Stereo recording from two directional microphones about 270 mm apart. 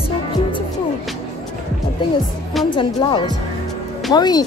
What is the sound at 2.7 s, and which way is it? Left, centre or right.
Speech, centre.